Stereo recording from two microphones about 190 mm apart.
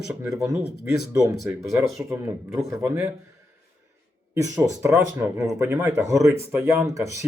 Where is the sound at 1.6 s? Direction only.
15° right (ahead or behind).